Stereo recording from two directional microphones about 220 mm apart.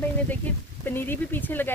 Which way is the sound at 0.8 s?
10° left (ahead or behind).